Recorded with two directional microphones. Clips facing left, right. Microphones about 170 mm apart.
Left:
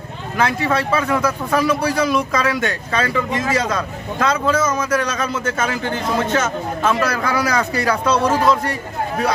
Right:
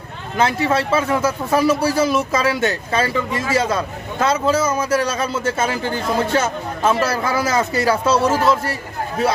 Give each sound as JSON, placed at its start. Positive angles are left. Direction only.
{"t": 0.4, "sound": "a man's voice", "side_deg": -25}
{"t": 8.1, "sound": "a man's voice", "side_deg": -5}